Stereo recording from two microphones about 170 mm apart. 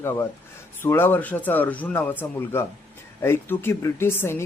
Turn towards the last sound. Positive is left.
turn(degrees=15)  # may be behind; listen again after turning